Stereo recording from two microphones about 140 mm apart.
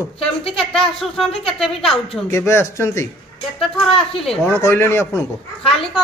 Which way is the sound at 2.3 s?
20° left (ahead or behind).